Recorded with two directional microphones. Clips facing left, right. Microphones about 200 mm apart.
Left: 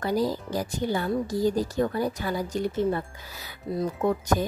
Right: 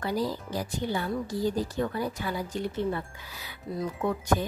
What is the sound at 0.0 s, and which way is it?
Speech, 45° left (ahead or behind).